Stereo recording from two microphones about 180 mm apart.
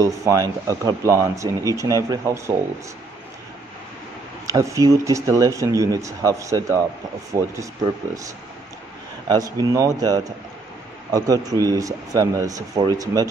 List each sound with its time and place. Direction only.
0.0 s speech: 20° right (ahead or behind)
4.5 s speech: 20° right (ahead or behind)
9.3 s speech: 20° right (ahead or behind)